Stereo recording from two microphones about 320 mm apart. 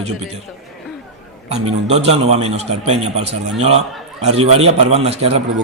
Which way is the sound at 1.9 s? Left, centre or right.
Centre.